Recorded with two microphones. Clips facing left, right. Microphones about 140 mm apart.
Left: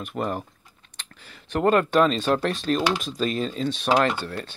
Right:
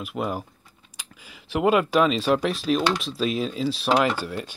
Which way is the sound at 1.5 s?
5° right (ahead or behind).